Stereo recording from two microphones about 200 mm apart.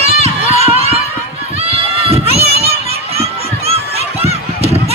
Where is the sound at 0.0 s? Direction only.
30° right (ahead or behind).